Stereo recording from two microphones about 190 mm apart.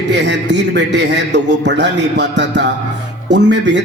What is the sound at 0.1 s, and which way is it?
A man's voice, 65° right (ahead or behind).